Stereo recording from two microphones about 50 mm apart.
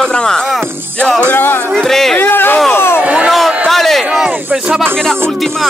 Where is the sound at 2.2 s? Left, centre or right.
Left.